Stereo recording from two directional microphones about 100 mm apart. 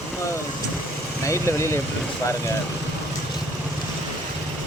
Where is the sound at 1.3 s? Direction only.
30° left (ahead or behind).